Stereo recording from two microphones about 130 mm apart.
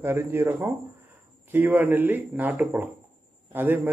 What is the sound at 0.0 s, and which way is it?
Speech, 15° right (ahead or behind).